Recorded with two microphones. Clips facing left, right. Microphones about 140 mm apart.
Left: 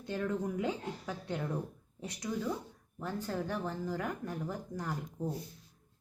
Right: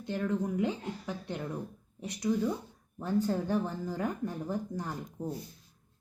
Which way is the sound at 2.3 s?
15° right (ahead or behind).